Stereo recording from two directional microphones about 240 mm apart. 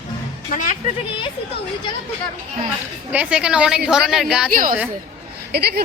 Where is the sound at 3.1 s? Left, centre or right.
Centre.